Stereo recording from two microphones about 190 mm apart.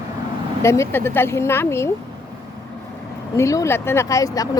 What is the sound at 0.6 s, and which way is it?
Speech, 15° left (ahead or behind).